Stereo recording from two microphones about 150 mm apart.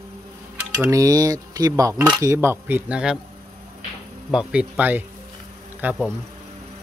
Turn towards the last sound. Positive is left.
turn(degrees=-10)  # may be behind; listen again after turning